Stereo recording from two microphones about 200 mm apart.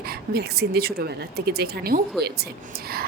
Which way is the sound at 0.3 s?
55° right (ahead or behind).